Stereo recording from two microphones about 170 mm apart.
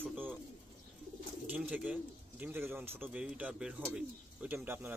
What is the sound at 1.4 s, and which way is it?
A man's voice, 10° right (ahead or behind).